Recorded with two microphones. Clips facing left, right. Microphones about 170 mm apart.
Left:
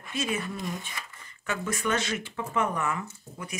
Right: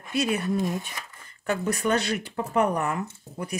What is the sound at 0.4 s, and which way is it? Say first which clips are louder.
Speech: right 7 dB; 40° right (ahead or behind).